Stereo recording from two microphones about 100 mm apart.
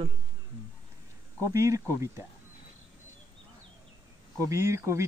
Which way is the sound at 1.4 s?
30° right (ahead or behind).